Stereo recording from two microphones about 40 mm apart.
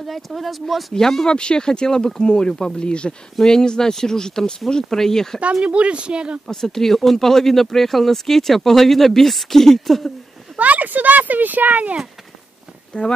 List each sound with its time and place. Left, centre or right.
0.0 s speech: centre
0.9 s speech: centre
1.3 s speech: left
5.4 s speech: right
6.4 s speech: centre
10.6 s speech: right
13.0 s speech: left